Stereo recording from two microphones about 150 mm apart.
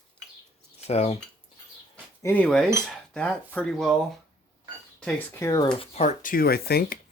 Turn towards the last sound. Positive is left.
turn(degrees=90)